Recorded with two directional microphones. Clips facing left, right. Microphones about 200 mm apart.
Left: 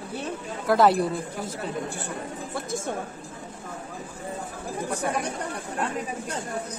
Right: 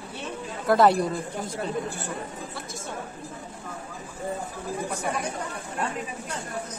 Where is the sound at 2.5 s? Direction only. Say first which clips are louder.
Left 7 dB; 50° left (ahead or behind).